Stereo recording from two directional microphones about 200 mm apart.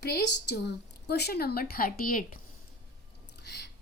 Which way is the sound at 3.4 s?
55° left (ahead or behind).